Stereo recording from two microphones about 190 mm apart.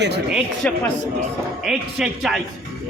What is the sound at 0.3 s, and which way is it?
A man's voice, 5° right (ahead or behind).